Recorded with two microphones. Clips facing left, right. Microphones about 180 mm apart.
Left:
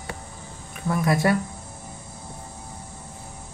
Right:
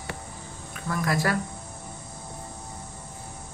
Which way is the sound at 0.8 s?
25° left (ahead or behind).